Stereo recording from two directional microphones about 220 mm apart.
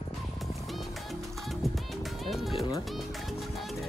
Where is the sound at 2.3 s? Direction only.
Centre (ahead or behind).